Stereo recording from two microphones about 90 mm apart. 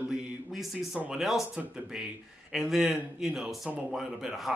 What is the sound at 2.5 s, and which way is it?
Speech, 5° right (ahead or behind).